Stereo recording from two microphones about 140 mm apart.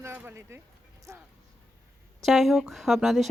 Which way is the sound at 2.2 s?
Centre (ahead or behind).